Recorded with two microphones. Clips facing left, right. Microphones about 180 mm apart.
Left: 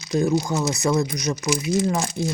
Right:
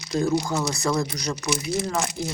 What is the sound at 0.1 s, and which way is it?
Speech, 20° left (ahead or behind).